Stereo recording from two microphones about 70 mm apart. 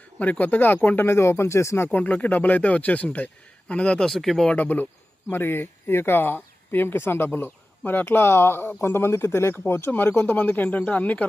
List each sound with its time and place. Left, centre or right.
0.2 s speech: left
1.9 s a man's voice: left
4.1 s speech: centre
4.4 s speech: left
9.9 s speech: left